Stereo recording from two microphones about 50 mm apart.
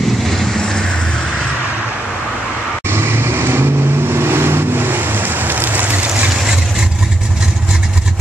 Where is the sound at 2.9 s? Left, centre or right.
Right.